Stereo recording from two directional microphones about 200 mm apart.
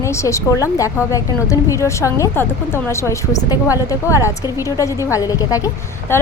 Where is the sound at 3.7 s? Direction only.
15° left (ahead or behind).